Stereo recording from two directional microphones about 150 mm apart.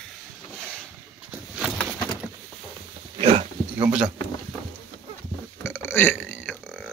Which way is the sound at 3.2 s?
35° right (ahead or behind).